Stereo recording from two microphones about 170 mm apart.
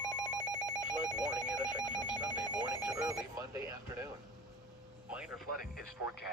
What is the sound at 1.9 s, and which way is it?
Telephone, 25° left (ahead or behind).